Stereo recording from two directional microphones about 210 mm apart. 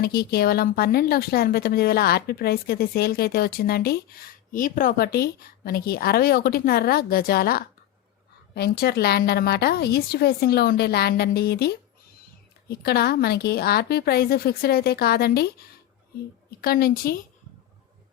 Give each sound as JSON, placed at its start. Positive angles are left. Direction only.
{"t": 0.0, "sound": "a woman's voice", "side_deg": 50}